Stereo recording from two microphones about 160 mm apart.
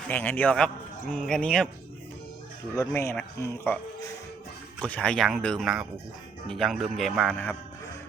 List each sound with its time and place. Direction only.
0.1 s speech: 10° left (ahead or behind)
2.7 s speech: 15° left (ahead or behind)
4.8 s speech: 5° left (ahead or behind)